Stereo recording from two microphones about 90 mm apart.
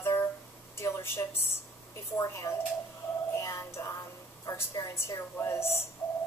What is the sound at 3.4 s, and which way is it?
Music, 35° left (ahead or behind).